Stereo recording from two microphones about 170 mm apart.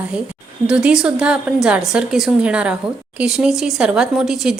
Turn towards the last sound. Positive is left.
turn(degrees=0)  # may be behind; listen again after turning